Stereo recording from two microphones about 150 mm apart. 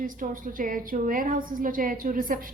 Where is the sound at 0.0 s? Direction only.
65° right (ahead or behind).